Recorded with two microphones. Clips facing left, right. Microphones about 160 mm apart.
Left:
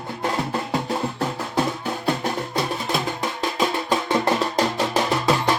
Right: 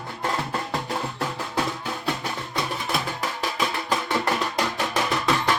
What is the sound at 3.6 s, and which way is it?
Music, 25° left (ahead or behind).